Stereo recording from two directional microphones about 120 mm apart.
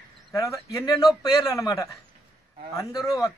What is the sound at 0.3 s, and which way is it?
Speech, 25° left (ahead or behind).